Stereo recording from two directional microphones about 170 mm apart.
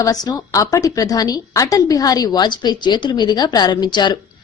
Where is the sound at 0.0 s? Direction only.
20° left (ahead or behind).